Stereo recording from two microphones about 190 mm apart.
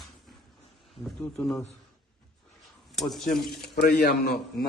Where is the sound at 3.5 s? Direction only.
55° left (ahead or behind).